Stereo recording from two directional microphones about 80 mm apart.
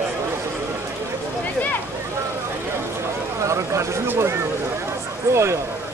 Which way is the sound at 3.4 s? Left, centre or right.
Right.